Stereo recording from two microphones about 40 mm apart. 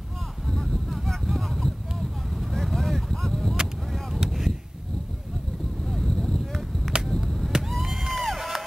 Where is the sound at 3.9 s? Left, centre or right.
Centre.